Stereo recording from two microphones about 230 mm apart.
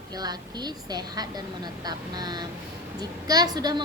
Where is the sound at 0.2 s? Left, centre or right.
Centre.